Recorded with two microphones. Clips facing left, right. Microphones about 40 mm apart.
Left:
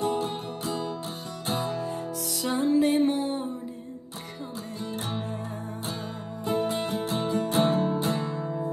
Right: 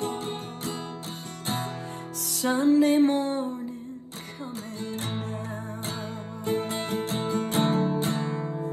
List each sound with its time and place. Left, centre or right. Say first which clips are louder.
0.2 s music: left 2 dB; right
4.7 s music: left 1 dB; right
6.4 s music: left 2 dB; right